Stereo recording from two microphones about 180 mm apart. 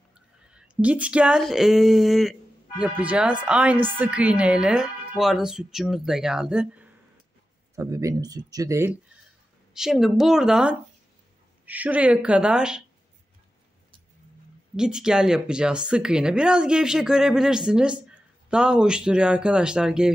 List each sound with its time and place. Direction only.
0.5 s speech: 5° right (ahead or behind)
9.8 s speech: centre (ahead or behind)
14.8 s speech: 5° right (ahead or behind)